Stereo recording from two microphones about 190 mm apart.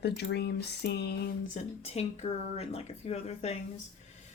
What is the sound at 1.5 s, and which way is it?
Speech, 35° left (ahead or behind).